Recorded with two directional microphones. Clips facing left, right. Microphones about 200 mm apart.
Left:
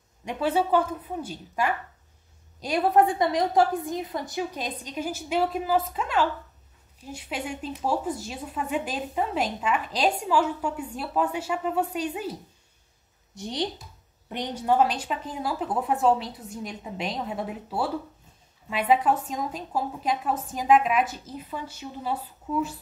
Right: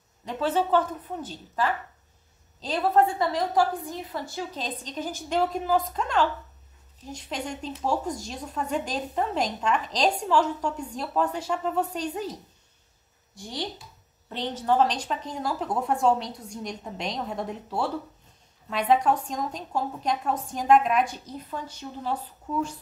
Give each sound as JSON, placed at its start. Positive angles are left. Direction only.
{"t": 0.2, "sound": "speech", "side_deg": 15}
{"t": 13.3, "sound": "a woman's voice", "side_deg": 20}